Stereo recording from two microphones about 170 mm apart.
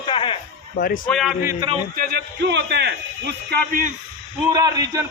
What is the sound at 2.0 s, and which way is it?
A man's voice, 65° right (ahead or behind).